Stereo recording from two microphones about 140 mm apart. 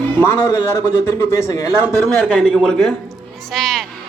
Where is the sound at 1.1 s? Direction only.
20° left (ahead or behind).